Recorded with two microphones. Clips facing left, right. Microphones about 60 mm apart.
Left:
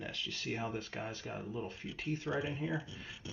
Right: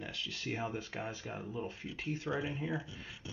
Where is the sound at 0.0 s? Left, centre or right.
Centre.